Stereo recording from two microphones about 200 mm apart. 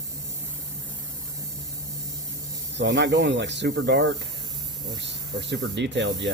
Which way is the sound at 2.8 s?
60° right (ahead or behind).